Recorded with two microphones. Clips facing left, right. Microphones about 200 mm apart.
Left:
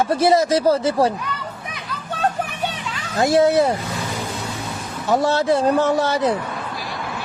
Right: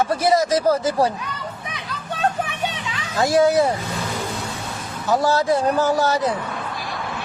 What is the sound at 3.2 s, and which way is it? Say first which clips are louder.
Speech: left 1 dB; 25° left (ahead or behind).